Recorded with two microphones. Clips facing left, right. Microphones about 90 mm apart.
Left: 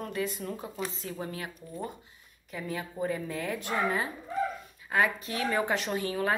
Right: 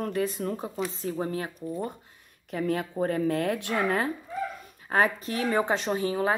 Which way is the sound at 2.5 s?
60° right (ahead or behind).